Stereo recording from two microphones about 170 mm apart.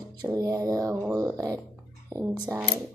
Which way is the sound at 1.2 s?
20° right (ahead or behind).